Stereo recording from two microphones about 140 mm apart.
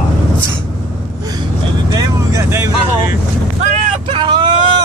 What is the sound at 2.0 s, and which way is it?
Vehicle, 20° right (ahead or behind).